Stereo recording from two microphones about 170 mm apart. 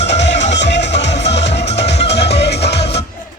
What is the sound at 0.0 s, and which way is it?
Music, 90° left.